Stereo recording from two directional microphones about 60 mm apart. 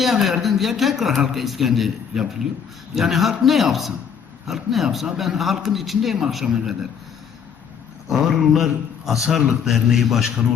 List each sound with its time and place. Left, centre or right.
0.0 s a man's voice: centre
8.1 s a man's voice: centre